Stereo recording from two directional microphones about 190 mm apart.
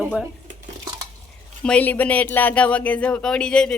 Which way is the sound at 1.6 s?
5° left (ahead or behind).